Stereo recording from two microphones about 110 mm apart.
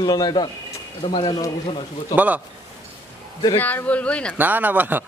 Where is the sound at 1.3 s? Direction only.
35° left (ahead or behind).